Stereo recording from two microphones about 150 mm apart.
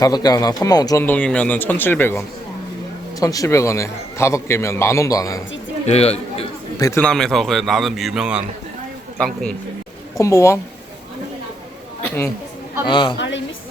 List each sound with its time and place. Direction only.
0.0 s a man's voice: 25° left (ahead or behind)
1.0 s a man's voice: 10° left (ahead or behind)
5.8 s a man's voice: 45° left (ahead or behind)
6.7 s a man's voice: 20° left (ahead or behind)
7.0 s a man's voice: 5° left (ahead or behind)
10.2 s a man's voice: 20° left (ahead or behind)
12.8 s a man's voice: 30° left (ahead or behind)